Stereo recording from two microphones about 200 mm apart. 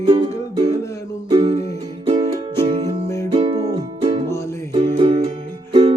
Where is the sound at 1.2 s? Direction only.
30° right (ahead or behind).